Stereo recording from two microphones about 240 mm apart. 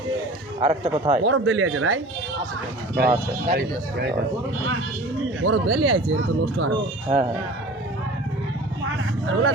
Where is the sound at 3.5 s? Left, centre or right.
Right.